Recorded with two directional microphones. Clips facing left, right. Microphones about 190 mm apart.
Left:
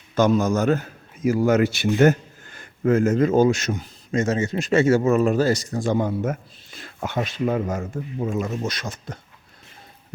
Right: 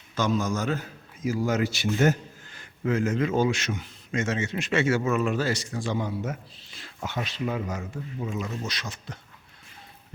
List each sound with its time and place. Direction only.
0.2 s a man's voice: 60° left (ahead or behind)